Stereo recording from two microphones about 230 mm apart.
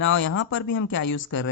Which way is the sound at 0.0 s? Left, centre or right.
Left.